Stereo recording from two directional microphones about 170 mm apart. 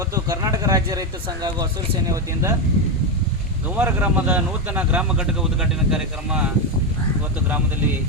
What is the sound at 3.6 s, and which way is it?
Speech, 10° right (ahead or behind).